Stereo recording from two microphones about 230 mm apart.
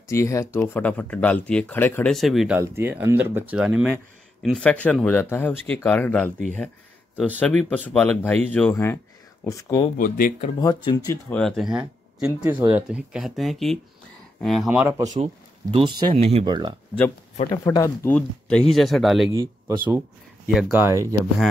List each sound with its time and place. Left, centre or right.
0.1 s speech: centre
9.9 s speech: left
10.6 s speech: centre
11.2 s speech: centre
15.7 s speech: right
17.4 s speech: centre
19.3 s speech: centre